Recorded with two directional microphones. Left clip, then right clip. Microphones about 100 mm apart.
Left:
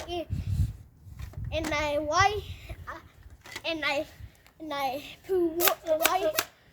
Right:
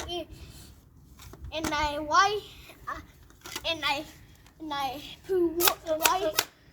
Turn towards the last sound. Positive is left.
turn(degrees=50)  # may be behind; listen again after turning